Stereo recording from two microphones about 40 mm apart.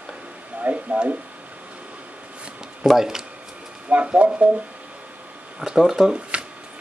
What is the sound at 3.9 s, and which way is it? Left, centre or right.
Speech, right.